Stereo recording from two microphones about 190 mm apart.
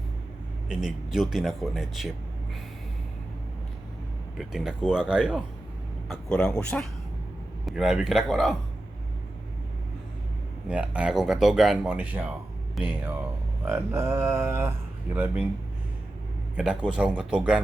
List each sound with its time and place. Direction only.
0.7 s speech: 5° right (ahead or behind)
4.4 s speech: 5° right (ahead or behind)
10.7 s speech: 5° right (ahead or behind)
16.6 s speech: 5° right (ahead or behind)